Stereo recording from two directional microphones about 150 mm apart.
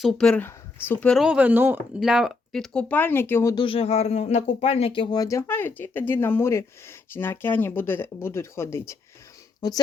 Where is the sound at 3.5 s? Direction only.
35° left (ahead or behind).